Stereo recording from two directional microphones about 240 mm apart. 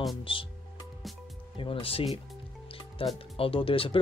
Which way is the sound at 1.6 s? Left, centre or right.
Left.